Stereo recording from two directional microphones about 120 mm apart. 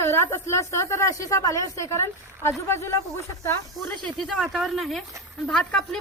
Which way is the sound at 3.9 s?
5° left (ahead or behind).